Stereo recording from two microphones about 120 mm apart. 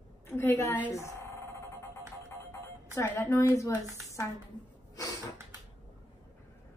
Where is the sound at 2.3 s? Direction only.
25° left (ahead or behind).